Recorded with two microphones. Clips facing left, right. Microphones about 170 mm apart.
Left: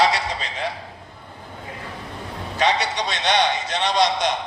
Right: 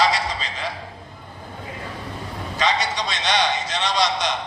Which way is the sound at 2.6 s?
60° left (ahead or behind).